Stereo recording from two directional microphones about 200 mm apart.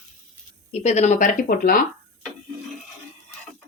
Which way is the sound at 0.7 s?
35° left (ahead or behind).